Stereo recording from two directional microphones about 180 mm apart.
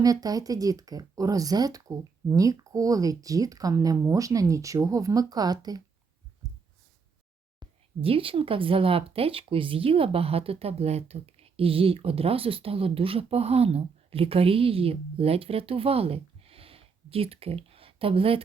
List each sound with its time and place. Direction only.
0.0 s speech: 20° right (ahead or behind)
7.6 s speech: 30° right (ahead or behind)